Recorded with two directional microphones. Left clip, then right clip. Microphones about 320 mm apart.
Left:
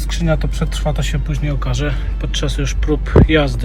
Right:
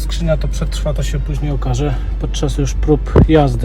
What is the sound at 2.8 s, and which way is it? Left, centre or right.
Speech, centre.